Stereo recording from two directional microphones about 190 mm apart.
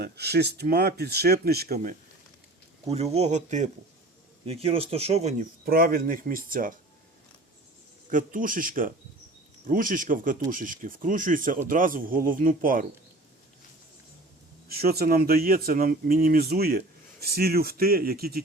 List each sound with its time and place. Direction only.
0.0 s speech: 60° right (ahead or behind)
2.9 s speech: 35° right (ahead or behind)
5.6 s speech: 50° right (ahead or behind)
8.1 s speech: 45° right (ahead or behind)
14.7 s speech: 55° right (ahead or behind)